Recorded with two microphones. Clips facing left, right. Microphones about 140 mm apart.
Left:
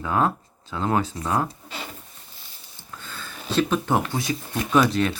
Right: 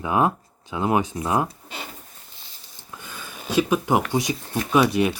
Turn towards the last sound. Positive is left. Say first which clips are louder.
# right 1 dB
turn(degrees=-15)  # may be behind; listen again after turning